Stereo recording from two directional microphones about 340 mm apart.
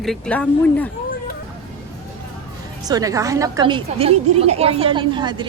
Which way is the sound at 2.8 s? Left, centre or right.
Centre.